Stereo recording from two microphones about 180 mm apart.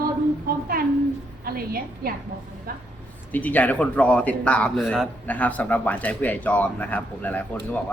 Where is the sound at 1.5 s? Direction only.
55° right (ahead or behind).